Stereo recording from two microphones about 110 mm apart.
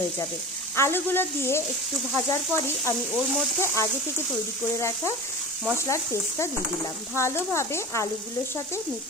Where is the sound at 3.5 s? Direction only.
25° left (ahead or behind).